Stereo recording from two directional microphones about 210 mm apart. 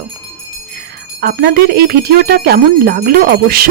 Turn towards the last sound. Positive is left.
turn(degrees=-45)  # may be behind; listen again after turning